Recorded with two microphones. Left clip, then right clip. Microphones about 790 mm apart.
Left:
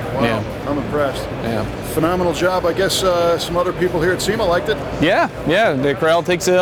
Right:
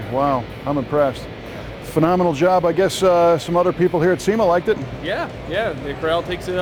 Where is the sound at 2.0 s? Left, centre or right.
Right.